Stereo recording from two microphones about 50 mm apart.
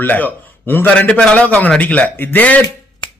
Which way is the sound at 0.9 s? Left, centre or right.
Left.